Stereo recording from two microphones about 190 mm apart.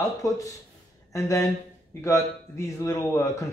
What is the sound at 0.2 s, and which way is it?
Speech, 15° left (ahead or behind).